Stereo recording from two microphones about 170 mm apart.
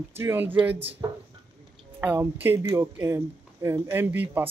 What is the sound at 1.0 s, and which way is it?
Speech, 25° right (ahead or behind).